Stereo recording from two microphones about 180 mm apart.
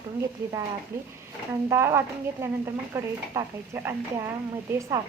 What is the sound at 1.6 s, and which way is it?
Speech, 15° right (ahead or behind).